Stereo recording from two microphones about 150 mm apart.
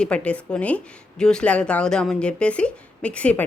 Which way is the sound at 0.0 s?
5° left (ahead or behind).